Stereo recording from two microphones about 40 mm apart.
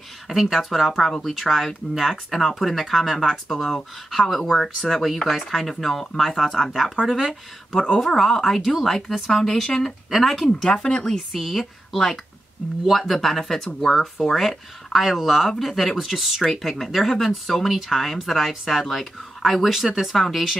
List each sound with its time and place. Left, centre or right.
0.3 s speech: centre
7.9 s speech: centre
10.0 s speech: centre
10.7 s speech: left
11.3 s speech: centre
14.4 s speech: centre